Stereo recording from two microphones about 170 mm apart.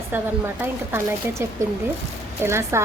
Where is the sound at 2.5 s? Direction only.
15° right (ahead or behind).